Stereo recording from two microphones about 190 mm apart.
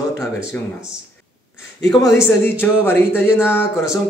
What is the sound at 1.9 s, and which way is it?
Speech, 15° left (ahead or behind).